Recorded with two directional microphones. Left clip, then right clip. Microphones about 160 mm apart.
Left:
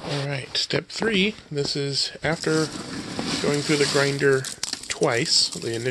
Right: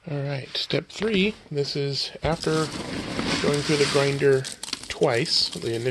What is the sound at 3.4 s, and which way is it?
Speech, centre (ahead or behind).